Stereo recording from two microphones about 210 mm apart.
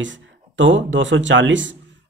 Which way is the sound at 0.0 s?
60° right (ahead or behind).